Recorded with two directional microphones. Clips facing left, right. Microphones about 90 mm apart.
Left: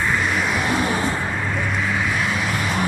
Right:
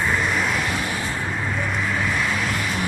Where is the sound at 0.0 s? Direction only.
Centre (ahead or behind).